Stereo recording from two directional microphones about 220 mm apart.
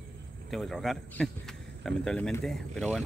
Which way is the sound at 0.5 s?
Centre (ahead or behind).